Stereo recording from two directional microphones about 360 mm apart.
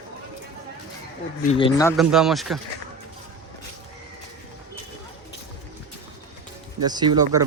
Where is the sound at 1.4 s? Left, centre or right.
Centre.